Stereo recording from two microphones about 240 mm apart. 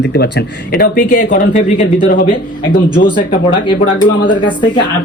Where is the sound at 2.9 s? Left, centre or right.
Centre.